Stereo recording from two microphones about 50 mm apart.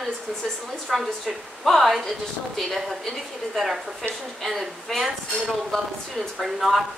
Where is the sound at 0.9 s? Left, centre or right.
Centre.